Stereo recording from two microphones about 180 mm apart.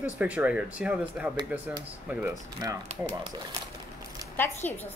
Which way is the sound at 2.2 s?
20° right (ahead or behind).